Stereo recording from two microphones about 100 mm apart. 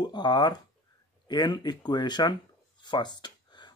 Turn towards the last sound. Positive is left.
turn(degrees=45)  # may be behind; listen again after turning